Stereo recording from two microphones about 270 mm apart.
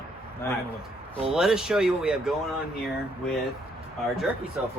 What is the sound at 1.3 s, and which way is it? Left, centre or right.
Speech, centre.